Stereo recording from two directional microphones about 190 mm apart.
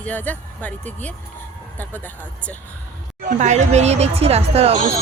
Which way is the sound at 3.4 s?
35° right (ahead or behind).